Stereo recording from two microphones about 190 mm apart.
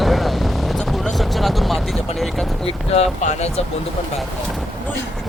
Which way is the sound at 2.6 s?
30° left (ahead or behind).